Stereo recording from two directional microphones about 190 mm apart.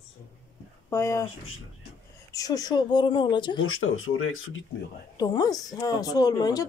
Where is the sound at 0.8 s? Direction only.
15° left (ahead or behind).